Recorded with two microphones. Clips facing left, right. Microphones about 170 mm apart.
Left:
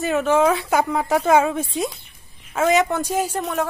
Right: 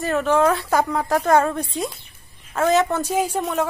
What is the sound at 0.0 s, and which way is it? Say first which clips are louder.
A woman's voice: left 1 dB; 5° left (ahead or behind).